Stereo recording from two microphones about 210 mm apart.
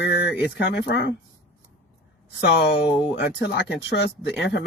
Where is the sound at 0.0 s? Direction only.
55° left (ahead or behind).